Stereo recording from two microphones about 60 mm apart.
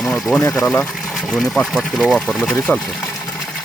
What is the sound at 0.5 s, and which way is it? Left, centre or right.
Speech, left.